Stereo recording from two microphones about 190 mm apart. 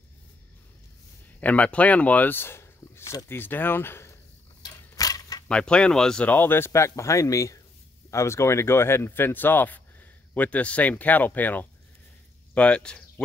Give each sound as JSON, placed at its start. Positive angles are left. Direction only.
{"t": 1.4, "sound": "speech", "side_deg": 5}
{"t": 4.6, "sound": "a sound", "side_deg": 20}
{"t": 5.5, "sound": "speech", "side_deg": 5}